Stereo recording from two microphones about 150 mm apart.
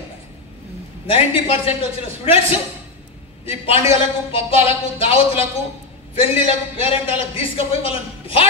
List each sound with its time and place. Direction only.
1.0 s a man's voice: 40° left (ahead or behind)